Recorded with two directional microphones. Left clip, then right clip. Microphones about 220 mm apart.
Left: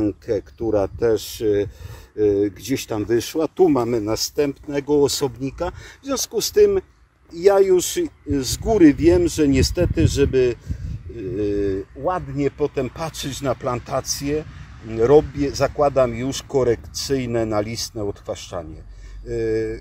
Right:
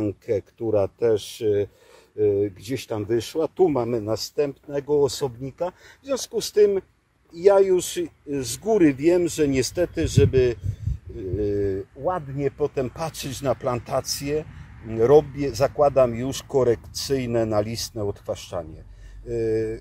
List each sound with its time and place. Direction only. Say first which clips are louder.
0.0 s speech: left 3 dB; 15° left (ahead or behind); by 19.8 s 5° right (ahead or behind)